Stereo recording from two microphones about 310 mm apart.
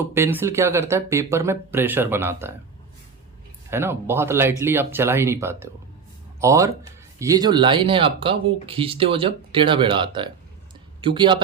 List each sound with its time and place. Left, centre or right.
0.1 s speech: centre
3.7 s speech: centre